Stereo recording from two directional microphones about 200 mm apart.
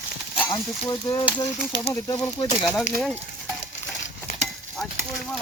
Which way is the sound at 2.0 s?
20° left (ahead or behind).